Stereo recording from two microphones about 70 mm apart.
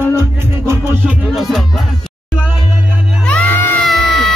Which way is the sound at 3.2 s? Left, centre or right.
Left.